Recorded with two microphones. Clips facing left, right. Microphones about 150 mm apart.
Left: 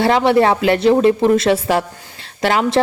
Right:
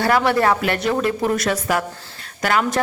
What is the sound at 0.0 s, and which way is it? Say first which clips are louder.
A woman's voice: left 4 dB; 25° left (ahead or behind).